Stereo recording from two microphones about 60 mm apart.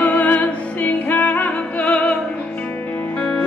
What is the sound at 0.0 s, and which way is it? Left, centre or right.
Music, left.